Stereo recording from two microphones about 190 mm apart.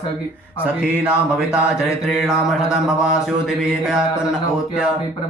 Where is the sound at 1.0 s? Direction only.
5° right (ahead or behind).